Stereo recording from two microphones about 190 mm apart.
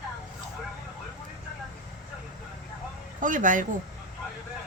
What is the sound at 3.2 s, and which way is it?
Speech, 45° right (ahead or behind).